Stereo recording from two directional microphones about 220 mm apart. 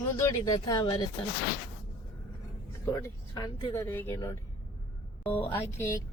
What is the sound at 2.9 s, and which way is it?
Speech, 15° left (ahead or behind).